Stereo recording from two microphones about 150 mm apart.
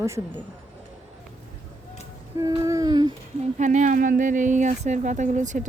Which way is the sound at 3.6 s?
55° right (ahead or behind).